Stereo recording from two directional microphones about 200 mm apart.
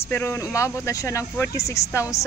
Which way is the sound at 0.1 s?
10° left (ahead or behind).